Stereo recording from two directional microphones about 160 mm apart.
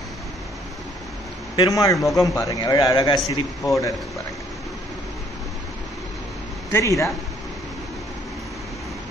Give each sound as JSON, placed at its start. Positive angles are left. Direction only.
{"t": 1.6, "sound": "a man's voice", "side_deg": 20}
{"t": 6.7, "sound": "a man's voice", "side_deg": 20}